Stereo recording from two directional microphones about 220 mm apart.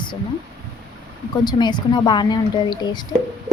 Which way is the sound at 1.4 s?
20° left (ahead or behind).